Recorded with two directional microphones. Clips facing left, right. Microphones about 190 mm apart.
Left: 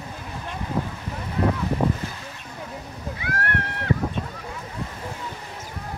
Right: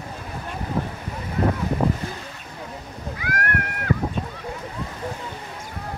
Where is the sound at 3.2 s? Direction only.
30° left (ahead or behind).